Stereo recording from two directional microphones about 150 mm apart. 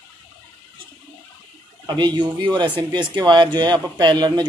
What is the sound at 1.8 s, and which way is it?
Speech, 30° right (ahead or behind).